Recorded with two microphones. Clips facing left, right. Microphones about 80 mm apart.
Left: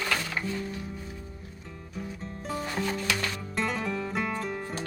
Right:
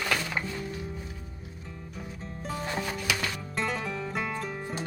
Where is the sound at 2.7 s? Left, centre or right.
Centre.